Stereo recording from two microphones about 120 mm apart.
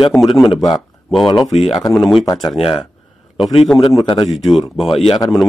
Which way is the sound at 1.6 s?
Centre (ahead or behind).